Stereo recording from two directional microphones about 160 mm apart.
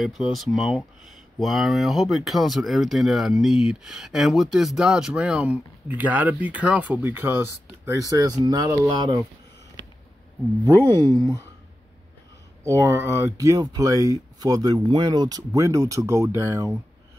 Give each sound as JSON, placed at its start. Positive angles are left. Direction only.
{"t": 0.0, "sound": "speech", "side_deg": 0}
{"t": 10.9, "sound": "speech", "side_deg": -25}
{"t": 12.6, "sound": "speech", "side_deg": -20}